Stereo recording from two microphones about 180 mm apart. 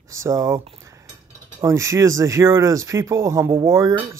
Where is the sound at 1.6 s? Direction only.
15° right (ahead or behind).